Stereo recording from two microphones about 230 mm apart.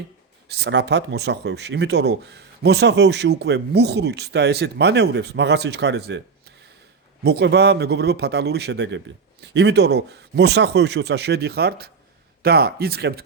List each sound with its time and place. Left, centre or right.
0.4 s speech: right
7.3 s speech: right